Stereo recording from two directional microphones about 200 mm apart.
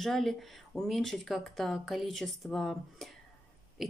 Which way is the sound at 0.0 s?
Centre (ahead or behind).